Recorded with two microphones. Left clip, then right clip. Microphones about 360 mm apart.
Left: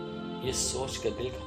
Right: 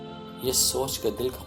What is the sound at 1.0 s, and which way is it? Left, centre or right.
Speech, right.